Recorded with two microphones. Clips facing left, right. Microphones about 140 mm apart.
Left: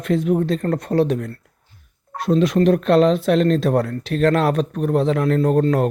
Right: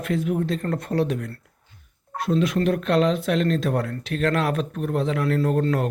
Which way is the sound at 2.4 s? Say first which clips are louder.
Left 6 dB; 30° left (ahead or behind).